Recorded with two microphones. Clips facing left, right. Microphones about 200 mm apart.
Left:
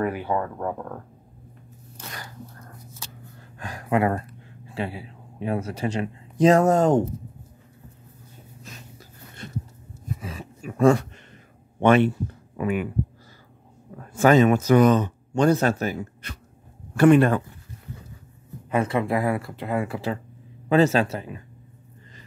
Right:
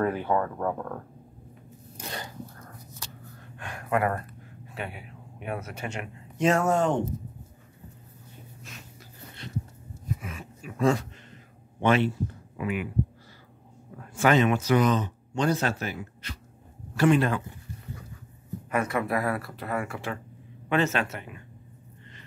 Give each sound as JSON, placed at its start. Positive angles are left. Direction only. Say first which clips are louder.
{"t": 0.0, "sound": "speech", "louder": "even", "side_deg": 10}
{"t": 3.5, "sound": "speech", "louder": "left 4 dB", "side_deg": 35}
{"t": 10.2, "sound": "a sound", "louder": "left 4 dB", "side_deg": 35}
{"t": 10.8, "sound": "speech", "louder": "left 6 dB", "side_deg": 55}
{"t": 14.2, "sound": "speech", "louder": "left 5 dB", "side_deg": 40}
{"t": 16.9, "sound": "speech", "louder": "left 6 dB", "side_deg": 55}
{"t": 18.7, "sound": "a man's voice", "louder": "left 4 dB", "side_deg": 30}